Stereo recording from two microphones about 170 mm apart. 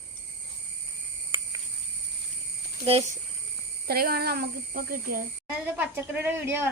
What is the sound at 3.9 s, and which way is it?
A child's voice, 65° right (ahead or behind).